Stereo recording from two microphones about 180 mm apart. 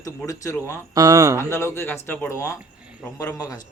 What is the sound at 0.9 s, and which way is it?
Speech, 20° right (ahead or behind).